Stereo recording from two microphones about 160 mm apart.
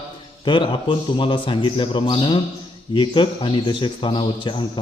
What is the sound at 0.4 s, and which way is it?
A man's voice, 30° left (ahead or behind).